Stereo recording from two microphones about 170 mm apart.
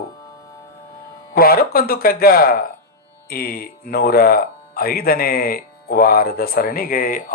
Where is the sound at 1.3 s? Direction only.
60° left (ahead or behind).